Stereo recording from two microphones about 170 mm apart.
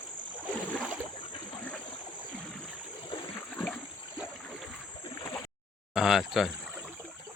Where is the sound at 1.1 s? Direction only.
30° left (ahead or behind).